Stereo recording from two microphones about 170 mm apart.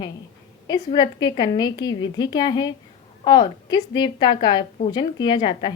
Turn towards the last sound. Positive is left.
turn(degrees=30)  # may be behind; listen again after turning